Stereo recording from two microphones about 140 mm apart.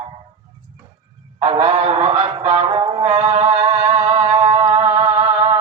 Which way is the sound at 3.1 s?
50° right (ahead or behind).